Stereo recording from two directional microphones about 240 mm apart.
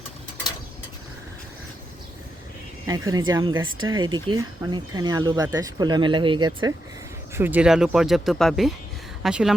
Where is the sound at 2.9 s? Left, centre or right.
Centre.